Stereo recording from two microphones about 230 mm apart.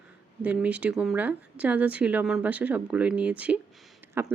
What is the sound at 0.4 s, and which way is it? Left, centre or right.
Speech, centre.